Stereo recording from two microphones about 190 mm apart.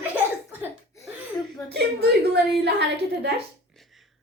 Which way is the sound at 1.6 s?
60° right (ahead or behind).